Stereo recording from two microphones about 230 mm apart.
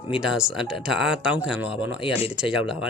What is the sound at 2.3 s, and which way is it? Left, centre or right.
Speech, centre.